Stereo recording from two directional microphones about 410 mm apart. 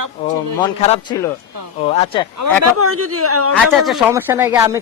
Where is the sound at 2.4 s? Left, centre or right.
Right.